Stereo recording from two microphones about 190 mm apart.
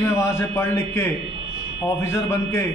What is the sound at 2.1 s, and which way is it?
Speech, 15° left (ahead or behind).